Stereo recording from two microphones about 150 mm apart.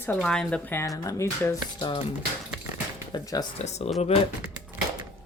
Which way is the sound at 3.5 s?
45° left (ahead or behind).